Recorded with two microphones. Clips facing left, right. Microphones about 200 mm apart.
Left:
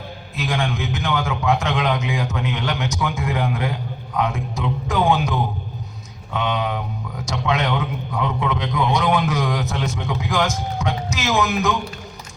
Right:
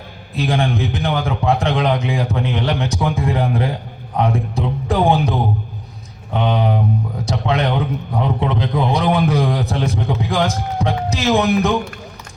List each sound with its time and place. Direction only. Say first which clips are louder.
0.3 s a man's voice: right 5 dB; 35° right (ahead or behind)